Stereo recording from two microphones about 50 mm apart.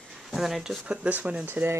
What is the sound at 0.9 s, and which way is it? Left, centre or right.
Speech, right.